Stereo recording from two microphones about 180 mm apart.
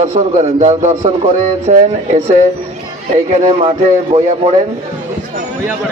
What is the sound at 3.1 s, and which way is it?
Speech, 35° right (ahead or behind).